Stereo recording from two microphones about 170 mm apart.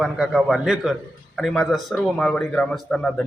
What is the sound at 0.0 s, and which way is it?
A man's voice, centre (ahead or behind).